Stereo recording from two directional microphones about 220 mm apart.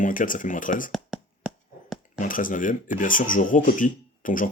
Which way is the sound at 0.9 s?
Centre (ahead or behind).